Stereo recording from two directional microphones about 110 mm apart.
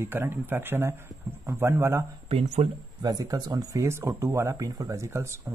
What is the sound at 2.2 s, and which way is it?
Speech, 65° right (ahead or behind).